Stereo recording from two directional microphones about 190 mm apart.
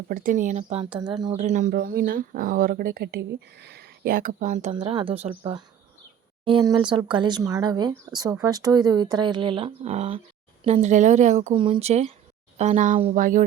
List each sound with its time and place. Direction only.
0.1 s speech: 45° right (ahead or behind); by 1.1 s 25° right (ahead or behind)
1.4 s speech: 40° right (ahead or behind)
1.7 s speech: 50° right (ahead or behind)
4.7 s speech: 25° right (ahead or behind); by 13.4 s 45° right (ahead or behind)